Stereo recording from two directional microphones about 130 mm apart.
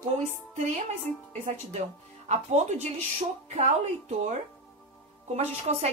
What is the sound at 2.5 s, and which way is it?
Speech, 60° right (ahead or behind).